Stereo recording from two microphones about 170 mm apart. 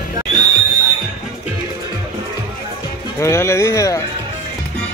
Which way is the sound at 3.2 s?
15° left (ahead or behind).